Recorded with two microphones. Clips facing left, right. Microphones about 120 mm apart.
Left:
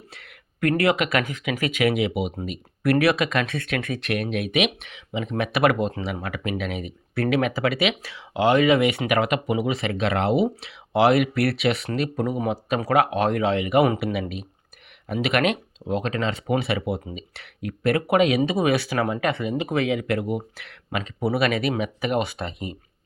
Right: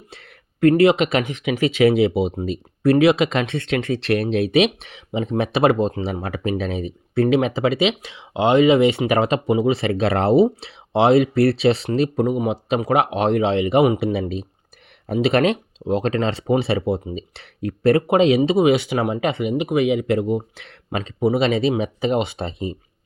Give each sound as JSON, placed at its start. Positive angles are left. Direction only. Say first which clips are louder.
{"t": 0.1, "sound": "speech", "louder": "right 3 dB", "side_deg": -30}